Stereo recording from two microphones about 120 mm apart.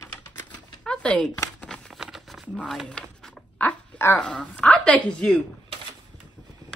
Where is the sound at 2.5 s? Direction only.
5° left (ahead or behind).